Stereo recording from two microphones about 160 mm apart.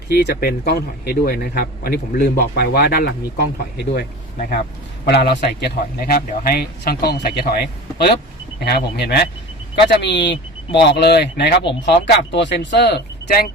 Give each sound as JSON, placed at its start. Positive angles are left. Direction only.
{"t": 0.1, "sound": "speech", "side_deg": 85}
{"t": 3.9, "sound": "speech", "side_deg": 65}
{"t": 5.0, "sound": "a man's voice", "side_deg": 90}
{"t": 8.6, "sound": "speech", "side_deg": 90}